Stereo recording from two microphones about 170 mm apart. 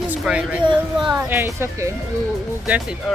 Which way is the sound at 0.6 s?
30° right (ahead or behind).